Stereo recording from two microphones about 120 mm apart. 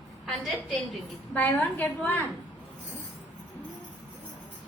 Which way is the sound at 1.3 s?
15° left (ahead or behind).